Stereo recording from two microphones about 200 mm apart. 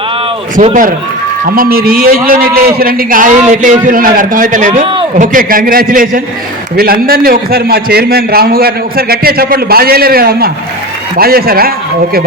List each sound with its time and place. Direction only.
0.5 s a man's voice: 40° right (ahead or behind)